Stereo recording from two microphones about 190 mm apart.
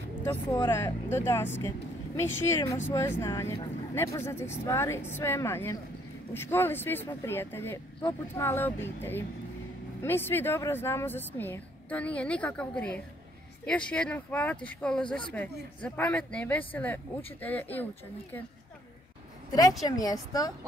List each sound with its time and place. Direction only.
0.3 s speech: 15° left (ahead or behind)
2.5 s speech: 15° left (ahead or behind)
19.8 s a woman's voice: 20° left (ahead or behind)